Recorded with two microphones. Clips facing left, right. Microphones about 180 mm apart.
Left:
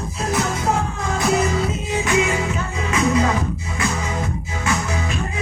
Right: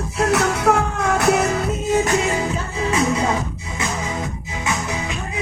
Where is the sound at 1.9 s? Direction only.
40° right (ahead or behind).